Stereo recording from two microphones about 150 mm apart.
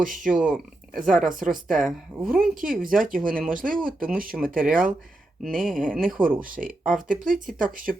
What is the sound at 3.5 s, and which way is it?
Speech, 65° right (ahead or behind).